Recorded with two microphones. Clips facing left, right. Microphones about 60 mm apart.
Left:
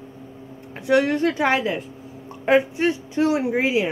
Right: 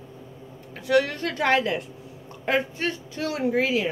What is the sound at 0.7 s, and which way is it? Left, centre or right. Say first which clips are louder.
Speech: left 4 dB; left.